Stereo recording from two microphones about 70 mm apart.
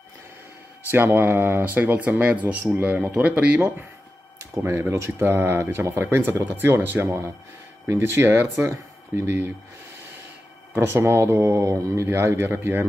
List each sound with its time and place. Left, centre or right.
0.9 s speech: right
4.4 s speech: right
10.7 s speech: right